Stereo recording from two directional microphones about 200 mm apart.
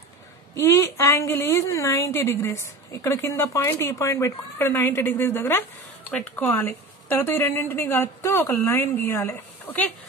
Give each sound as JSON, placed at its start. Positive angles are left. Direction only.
{"t": 0.6, "sound": "speech", "side_deg": 15}